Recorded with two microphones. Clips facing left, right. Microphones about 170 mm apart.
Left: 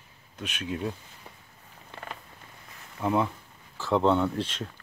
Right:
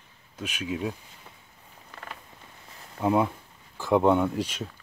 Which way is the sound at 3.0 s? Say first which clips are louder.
Right 3 dB; 15° right (ahead or behind).